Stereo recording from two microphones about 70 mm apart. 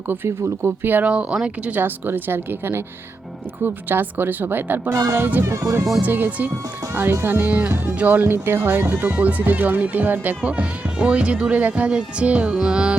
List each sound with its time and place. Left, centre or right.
0.3 s speech: right
1.1 s speech: centre
1.7 s speech: right
4.9 s speech: right
5.1 s speech: right; by 13.0 s centre